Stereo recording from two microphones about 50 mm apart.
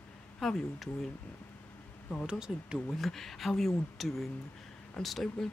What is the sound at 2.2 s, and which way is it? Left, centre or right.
Speech, centre.